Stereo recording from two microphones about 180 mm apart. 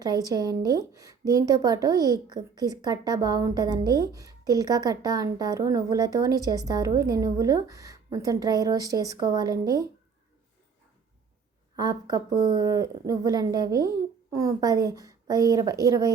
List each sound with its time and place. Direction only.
0.0 s a woman's voice: 20° right (ahead or behind)
11.8 s a woman's voice: 20° right (ahead or behind)